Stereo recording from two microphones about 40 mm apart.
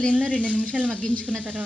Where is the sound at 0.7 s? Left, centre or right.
Right.